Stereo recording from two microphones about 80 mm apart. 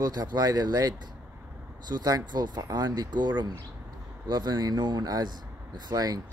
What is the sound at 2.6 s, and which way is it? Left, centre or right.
Speech, right.